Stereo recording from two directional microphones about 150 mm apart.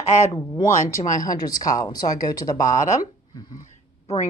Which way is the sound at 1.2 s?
25° left (ahead or behind).